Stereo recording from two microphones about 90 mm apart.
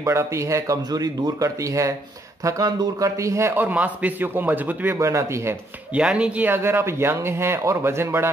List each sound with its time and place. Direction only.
0.0 s a man's voice: 30° right (ahead or behind)
4.9 s speech: 35° right (ahead or behind)
5.9 s a man's voice: 10° right (ahead or behind); by 8.3 s 25° right (ahead or behind)